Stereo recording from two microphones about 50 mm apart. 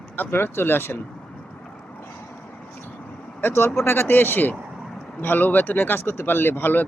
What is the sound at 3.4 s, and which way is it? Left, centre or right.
Speech, left.